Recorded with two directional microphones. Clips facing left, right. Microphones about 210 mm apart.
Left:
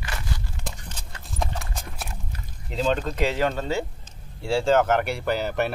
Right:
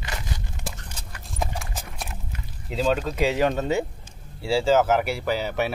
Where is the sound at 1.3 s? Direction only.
5° right (ahead or behind).